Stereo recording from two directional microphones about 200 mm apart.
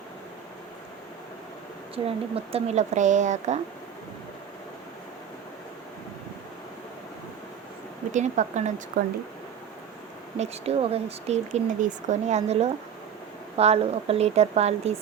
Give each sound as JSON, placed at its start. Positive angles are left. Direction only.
{"t": 2.0, "sound": "speech", "side_deg": -30}
{"t": 8.1, "sound": "speech", "side_deg": -35}
{"t": 9.0, "sound": "speech", "side_deg": -50}
{"t": 10.3, "sound": "speech", "side_deg": -30}